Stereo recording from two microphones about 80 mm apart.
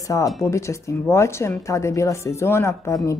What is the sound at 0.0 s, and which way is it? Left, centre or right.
Speech, left.